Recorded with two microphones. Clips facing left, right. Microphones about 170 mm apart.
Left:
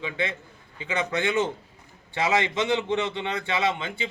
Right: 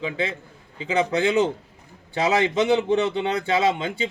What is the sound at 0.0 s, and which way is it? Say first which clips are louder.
Speech: right 3 dB; 35° right (ahead or behind).